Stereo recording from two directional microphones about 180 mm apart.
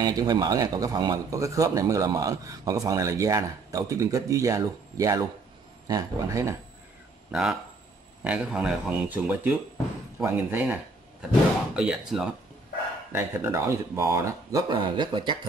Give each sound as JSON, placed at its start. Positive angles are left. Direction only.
{"t": 0.0, "sound": "speech", "side_deg": -20}
{"t": 7.2, "sound": "speech", "side_deg": -5}